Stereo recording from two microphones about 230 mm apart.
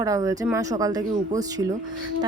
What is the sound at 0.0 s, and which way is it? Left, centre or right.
Speech, centre.